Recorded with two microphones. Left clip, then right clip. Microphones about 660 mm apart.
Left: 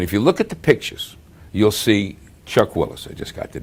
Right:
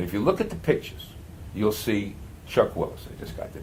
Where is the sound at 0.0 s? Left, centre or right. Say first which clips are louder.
Left 7 dB; left.